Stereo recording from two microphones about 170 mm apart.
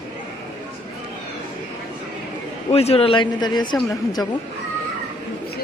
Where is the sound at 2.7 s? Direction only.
35° left (ahead or behind).